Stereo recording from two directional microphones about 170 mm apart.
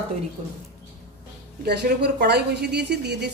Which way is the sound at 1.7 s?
75° right (ahead or behind).